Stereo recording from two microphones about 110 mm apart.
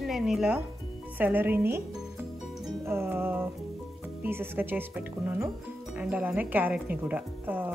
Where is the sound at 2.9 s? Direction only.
20° right (ahead or behind).